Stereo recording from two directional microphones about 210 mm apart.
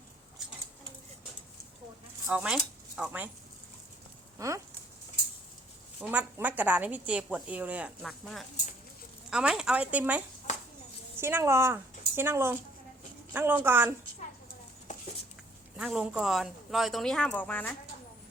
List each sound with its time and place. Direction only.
2.2 s speech: 5° right (ahead or behind)
4.4 s speech: 15° right (ahead or behind)
6.0 s a woman's voice: 5° right (ahead or behind)
14.9 s a sound: 35° left (ahead or behind)
15.8 s speech: centre (ahead or behind)